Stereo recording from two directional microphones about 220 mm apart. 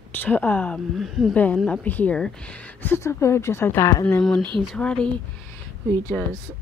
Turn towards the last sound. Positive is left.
turn(degrees=5)  # may be behind; listen again after turning